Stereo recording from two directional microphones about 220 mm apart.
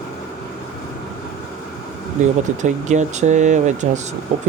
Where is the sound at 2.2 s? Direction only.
35° right (ahead or behind).